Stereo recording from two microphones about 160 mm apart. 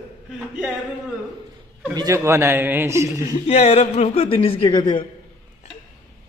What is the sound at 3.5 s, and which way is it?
Speech, 40° left (ahead or behind).